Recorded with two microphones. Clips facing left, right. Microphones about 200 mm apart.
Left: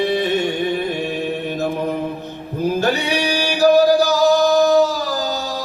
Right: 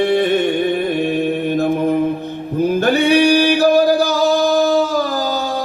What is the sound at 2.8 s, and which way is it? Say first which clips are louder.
Male singing: right 10 dB; 55° right (ahead or behind).